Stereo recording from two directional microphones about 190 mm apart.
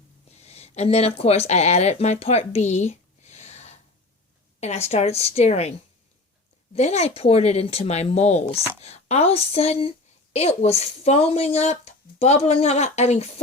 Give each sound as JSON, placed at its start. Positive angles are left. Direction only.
{"t": 0.3, "sound": "speech", "side_deg": 35}
{"t": 6.7, "sound": "speech", "side_deg": 35}